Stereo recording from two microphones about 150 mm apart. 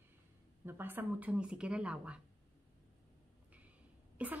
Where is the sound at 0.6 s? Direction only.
15° right (ahead or behind).